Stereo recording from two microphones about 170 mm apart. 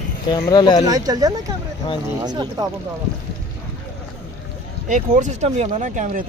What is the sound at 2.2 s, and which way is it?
Speech, 25° right (ahead or behind).